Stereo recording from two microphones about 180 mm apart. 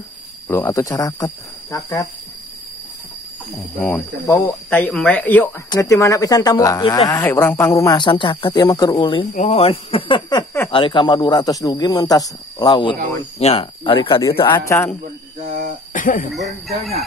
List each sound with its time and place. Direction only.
0.5 s speech: 15° left (ahead or behind)
3.5 s speech: 15° left (ahead or behind)
9.3 s speech: 40° left (ahead or behind)
14.7 s speech: 15° left (ahead or behind)
15.4 s speech: 45° right (ahead or behind)
15.9 s cough: 50° left (ahead or behind)
16.3 s speech: centre (ahead or behind)